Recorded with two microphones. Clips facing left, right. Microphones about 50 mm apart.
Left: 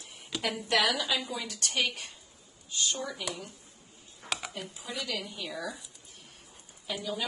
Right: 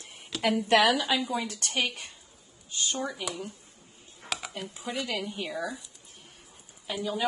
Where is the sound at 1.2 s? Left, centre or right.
Centre.